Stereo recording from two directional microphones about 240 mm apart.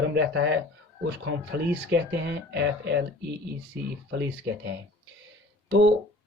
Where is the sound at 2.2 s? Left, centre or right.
Right.